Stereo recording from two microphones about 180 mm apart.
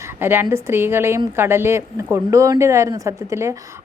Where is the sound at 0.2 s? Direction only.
10° right (ahead or behind).